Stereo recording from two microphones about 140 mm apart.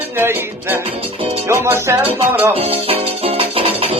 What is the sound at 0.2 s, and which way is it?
Music, 15° right (ahead or behind).